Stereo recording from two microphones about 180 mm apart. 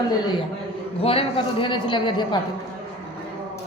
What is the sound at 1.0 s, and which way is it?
A man's voice, 30° left (ahead or behind).